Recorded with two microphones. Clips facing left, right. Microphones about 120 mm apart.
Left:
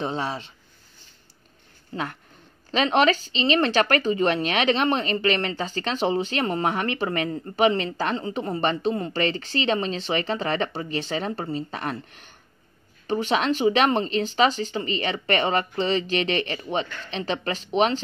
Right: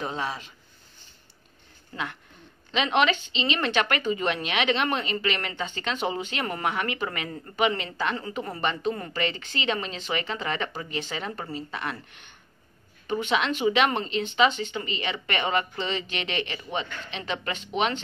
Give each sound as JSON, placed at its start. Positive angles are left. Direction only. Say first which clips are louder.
{"t": 0.0, "sound": "speech", "louder": "left 3 dB", "side_deg": 30}
{"t": 2.7, "sound": "a woman's voice", "louder": "left 3 dB", "side_deg": 35}